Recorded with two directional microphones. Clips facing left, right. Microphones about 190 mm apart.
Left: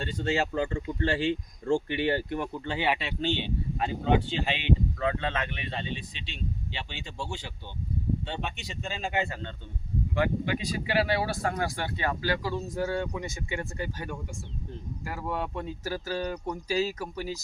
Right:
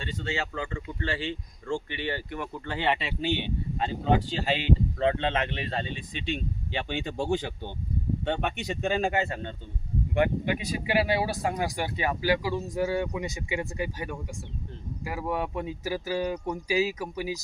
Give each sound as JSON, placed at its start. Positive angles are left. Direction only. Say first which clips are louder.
{"t": 0.0, "sound": "speech", "louder": "left 4 dB", "side_deg": 45}
{"t": 2.5, "sound": "speech", "louder": "right 4 dB", "side_deg": 15}
{"t": 3.1, "sound": "speech", "louder": "right 1 dB", "side_deg": -10}
{"t": 4.1, "sound": "speech", "louder": "right 1 dB", "side_deg": -40}
{"t": 5.0, "sound": "speech", "louder": "right 4 dB", "side_deg": -25}
{"t": 5.7, "sound": "speech", "louder": "right 3 dB", "side_deg": -50}
{"t": 10.2, "sound": "speech", "louder": "right 2 dB", "side_deg": -20}